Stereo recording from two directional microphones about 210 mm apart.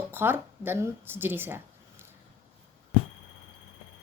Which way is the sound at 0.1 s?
10° right (ahead or behind).